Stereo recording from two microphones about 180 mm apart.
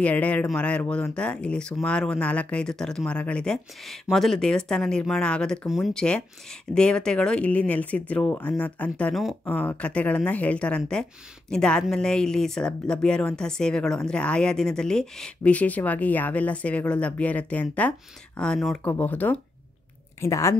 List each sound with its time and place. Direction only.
0.0 s speech: 5° left (ahead or behind)